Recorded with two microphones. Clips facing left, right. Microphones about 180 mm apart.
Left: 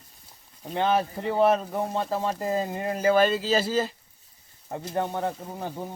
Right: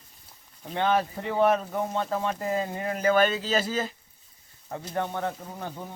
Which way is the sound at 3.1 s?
10° left (ahead or behind).